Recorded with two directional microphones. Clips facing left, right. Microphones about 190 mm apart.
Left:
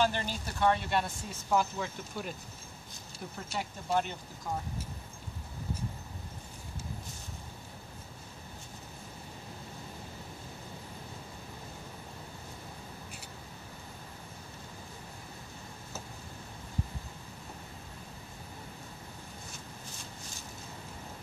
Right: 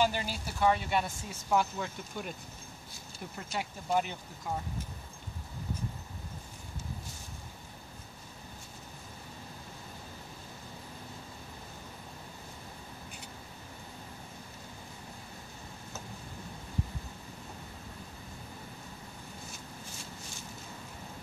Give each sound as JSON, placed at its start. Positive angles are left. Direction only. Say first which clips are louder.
{"t": 0.0, "sound": "speech", "louder": "even", "side_deg": -10}
{"t": 3.4, "sound": "speech", "louder": "right 1 dB", "side_deg": -5}